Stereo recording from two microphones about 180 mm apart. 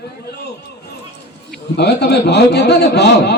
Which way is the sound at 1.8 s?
65° left (ahead or behind).